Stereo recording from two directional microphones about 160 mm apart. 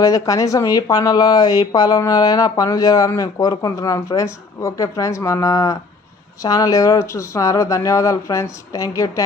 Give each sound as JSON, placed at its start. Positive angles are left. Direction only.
{"t": 0.0, "sound": "speech", "side_deg": 20}